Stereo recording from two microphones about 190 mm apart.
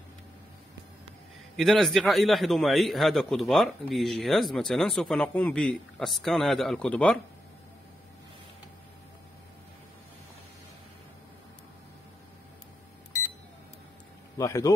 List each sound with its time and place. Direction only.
1.6 s a man's voice: centre (ahead or behind)
14.4 s speech: 15° left (ahead or behind)